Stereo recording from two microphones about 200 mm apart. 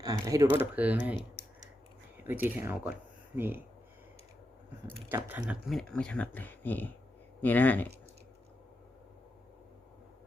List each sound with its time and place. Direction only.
0.0 s typing: 20° right (ahead or behind)
0.6 s speech: 10° right (ahead or behind)
2.2 s speech: 10° right (ahead or behind)
5.0 s speech: 10° right (ahead or behind); by 7.9 s 10° left (ahead or behind)